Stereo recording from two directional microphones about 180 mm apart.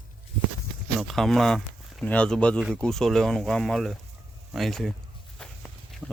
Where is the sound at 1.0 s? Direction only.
Centre (ahead or behind).